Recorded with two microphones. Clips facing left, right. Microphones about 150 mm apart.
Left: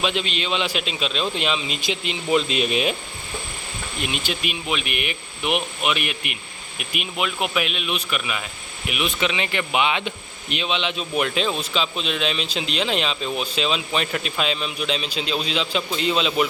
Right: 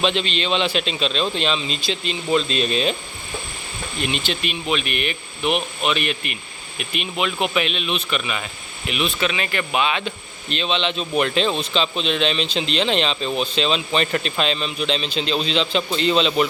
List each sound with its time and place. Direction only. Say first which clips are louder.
0.0 s a man's voice: right 3 dB; 10° left (ahead or behind)
4.0 s a man's voice: right 2 dB; 10° left (ahead or behind)